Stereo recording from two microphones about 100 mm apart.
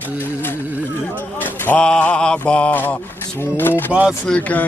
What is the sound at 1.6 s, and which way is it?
Mantra, 10° left (ahead or behind).